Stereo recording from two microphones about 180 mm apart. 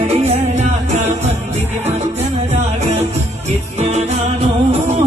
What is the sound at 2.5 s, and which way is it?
Music, 40° right (ahead or behind).